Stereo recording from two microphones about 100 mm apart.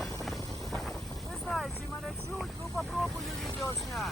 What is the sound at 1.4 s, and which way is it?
Vehicle, 5° left (ahead or behind).